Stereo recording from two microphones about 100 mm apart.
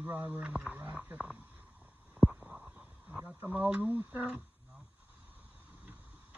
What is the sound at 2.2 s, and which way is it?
Stomach rumble, 10° right (ahead or behind).